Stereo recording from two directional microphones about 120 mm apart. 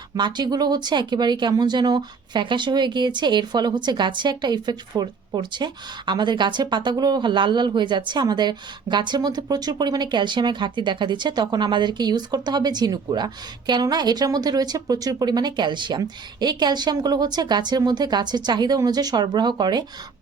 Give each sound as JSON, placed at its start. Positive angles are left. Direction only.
{"t": 0.2, "sound": "speech", "side_deg": -40}